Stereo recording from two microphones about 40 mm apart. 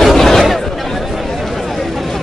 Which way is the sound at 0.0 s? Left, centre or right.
Centre.